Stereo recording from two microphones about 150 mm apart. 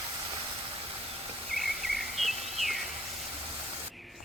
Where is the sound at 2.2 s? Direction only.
Centre (ahead or behind).